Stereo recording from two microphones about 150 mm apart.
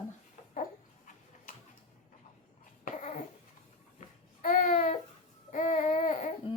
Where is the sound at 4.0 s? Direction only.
65° left (ahead or behind).